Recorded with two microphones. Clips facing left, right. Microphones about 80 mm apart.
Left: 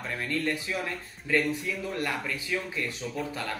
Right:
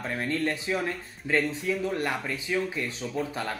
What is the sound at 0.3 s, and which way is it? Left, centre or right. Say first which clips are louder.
Speech: right 2 dB; right.